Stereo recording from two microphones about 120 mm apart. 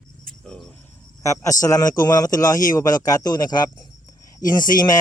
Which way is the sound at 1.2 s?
25° left (ahead or behind).